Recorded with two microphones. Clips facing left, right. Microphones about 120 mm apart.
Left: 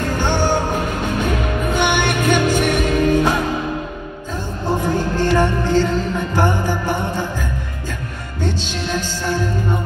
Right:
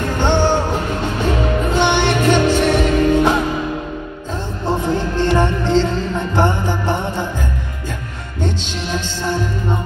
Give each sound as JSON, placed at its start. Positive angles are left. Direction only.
{"t": 0.2, "sound": "music", "side_deg": -20}
{"t": 1.7, "sound": "music", "side_deg": -25}
{"t": 4.6, "sound": "music", "side_deg": -20}